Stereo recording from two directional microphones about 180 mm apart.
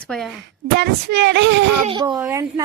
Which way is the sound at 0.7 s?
70° right (ahead or behind).